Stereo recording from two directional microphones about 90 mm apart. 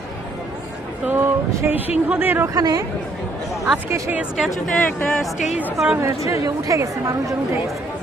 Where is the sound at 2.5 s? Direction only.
45° right (ahead or behind).